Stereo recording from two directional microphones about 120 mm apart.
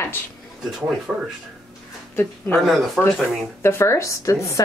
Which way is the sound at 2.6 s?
Centre (ahead or behind).